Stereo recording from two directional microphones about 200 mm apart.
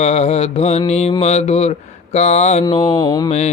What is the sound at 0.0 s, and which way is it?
Mantra, 35° left (ahead or behind).